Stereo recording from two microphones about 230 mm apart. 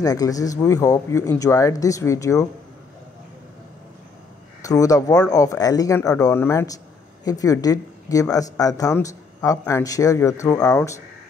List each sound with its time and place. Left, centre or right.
0.0 s speech: centre
4.6 s speech: centre